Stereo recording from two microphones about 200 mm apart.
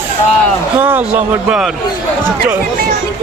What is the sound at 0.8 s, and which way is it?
Speech, 10° right (ahead or behind).